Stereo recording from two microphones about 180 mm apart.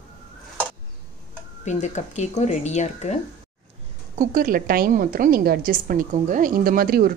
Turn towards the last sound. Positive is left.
turn(degrees=-55)  # may be behind; listen again after turning